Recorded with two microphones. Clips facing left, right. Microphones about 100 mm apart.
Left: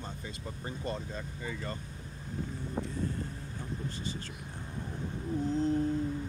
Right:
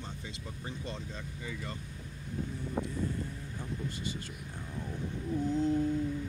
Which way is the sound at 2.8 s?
40° right (ahead or behind).